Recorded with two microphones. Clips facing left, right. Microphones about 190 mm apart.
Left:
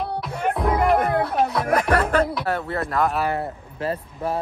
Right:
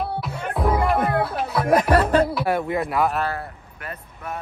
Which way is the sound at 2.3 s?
10° right (ahead or behind).